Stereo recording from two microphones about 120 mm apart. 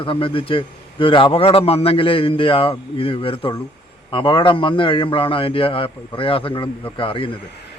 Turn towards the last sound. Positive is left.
turn(degrees=50)  # may be behind; listen again after turning